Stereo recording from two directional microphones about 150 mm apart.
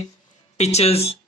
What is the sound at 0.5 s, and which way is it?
Speech, 45° left (ahead or behind).